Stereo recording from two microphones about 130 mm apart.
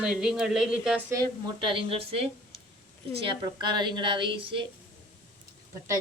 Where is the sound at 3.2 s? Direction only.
35° right (ahead or behind).